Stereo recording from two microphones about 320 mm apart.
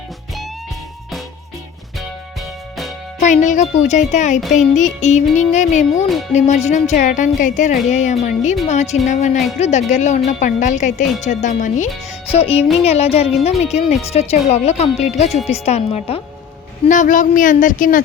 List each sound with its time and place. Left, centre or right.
3.2 s speech: left